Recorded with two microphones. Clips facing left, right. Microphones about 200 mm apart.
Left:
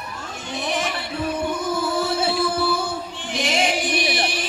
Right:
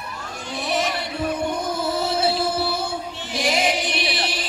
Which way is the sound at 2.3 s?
50° left (ahead or behind).